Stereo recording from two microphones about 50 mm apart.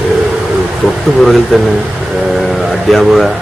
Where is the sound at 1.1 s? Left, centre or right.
Centre.